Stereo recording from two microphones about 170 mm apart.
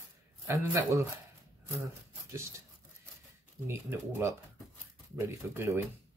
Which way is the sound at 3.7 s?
15° right (ahead or behind).